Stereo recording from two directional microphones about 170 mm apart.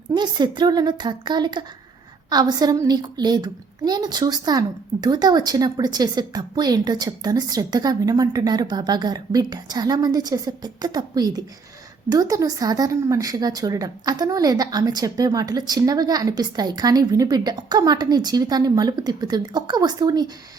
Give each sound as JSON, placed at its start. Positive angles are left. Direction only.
{"t": 0.2, "sound": "a child's voice", "side_deg": -25}